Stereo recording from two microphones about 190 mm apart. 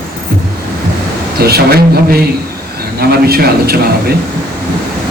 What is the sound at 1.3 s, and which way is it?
A man's voice, 55° right (ahead or behind).